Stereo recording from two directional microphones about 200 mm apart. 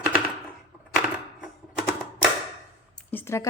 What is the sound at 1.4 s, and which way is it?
Typewriter, centre (ahead or behind).